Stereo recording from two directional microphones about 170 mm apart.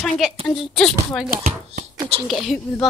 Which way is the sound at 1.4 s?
40° right (ahead or behind).